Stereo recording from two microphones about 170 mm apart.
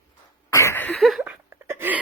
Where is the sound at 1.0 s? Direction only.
Centre (ahead or behind).